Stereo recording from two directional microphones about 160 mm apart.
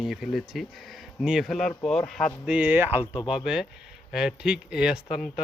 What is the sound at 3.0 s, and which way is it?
Speech, 30° left (ahead or behind).